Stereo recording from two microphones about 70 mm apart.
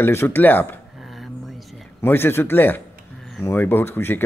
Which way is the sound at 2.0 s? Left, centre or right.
Left.